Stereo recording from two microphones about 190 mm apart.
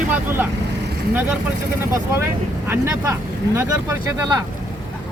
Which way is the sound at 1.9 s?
15° right (ahead or behind).